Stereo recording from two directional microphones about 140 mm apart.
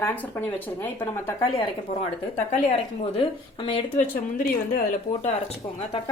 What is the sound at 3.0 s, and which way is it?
Speech, 40° left (ahead or behind).